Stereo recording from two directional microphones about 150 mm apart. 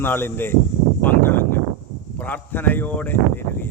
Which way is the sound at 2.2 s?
10° left (ahead or behind).